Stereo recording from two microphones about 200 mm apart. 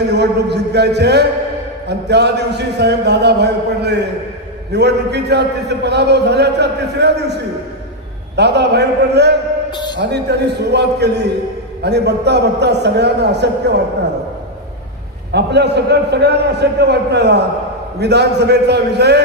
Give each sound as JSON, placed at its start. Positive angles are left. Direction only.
{"t": 0.1, "sound": "a man's voice", "side_deg": -55}
{"t": 8.4, "sound": "a man's voice", "side_deg": -55}
{"t": 9.7, "sound": "a sound", "side_deg": 20}
{"t": 9.9, "sound": "a man's voice", "side_deg": -55}
{"t": 15.3, "sound": "a man's voice", "side_deg": -55}